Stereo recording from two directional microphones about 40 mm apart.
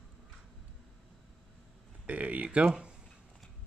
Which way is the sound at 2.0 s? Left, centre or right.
Right.